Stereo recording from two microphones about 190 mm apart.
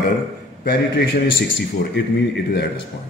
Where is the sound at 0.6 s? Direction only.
55° left (ahead or behind).